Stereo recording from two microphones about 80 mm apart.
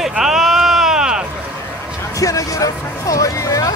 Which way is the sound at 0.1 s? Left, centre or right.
Centre.